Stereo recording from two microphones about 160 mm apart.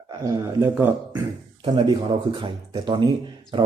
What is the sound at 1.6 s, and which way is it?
Speech, 30° right (ahead or behind).